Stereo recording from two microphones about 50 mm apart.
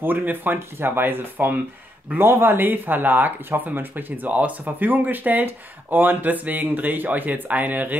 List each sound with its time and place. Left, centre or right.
0.0 s speech: right